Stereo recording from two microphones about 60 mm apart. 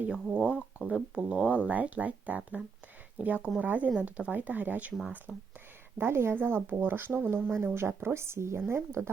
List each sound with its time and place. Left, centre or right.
0.1 s speech: centre
5.3 s speech: centre
6.0 s speech: right